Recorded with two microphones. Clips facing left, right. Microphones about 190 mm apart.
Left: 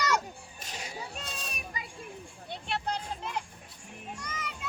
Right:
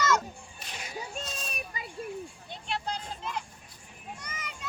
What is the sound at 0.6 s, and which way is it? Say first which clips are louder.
Music: left 1 dB; 35° left (ahead or behind).